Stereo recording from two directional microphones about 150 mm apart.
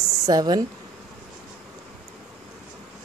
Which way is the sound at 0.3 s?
25° right (ahead or behind).